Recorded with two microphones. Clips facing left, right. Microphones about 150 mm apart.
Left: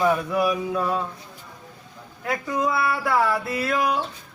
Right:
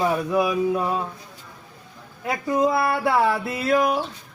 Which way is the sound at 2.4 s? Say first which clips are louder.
Right 4 dB; 25° right (ahead or behind).